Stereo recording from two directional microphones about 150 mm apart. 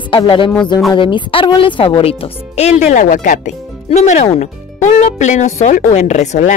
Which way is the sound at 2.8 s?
55° left (ahead or behind).